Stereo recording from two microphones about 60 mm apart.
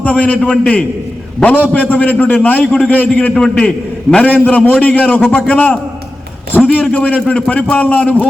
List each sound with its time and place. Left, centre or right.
0.0 s a man's voice: left
1.5 s a man's voice: left
3.3 s a man's voice: centre